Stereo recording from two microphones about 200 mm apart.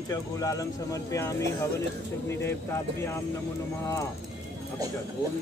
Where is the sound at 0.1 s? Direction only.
15° left (ahead or behind).